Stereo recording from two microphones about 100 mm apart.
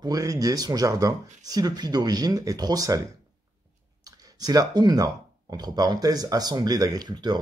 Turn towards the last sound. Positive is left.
turn(degrees=-45)  # may be behind; listen again after turning